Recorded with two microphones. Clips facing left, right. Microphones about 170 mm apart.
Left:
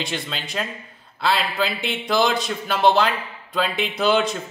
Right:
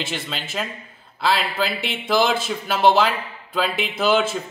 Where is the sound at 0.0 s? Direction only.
5° right (ahead or behind).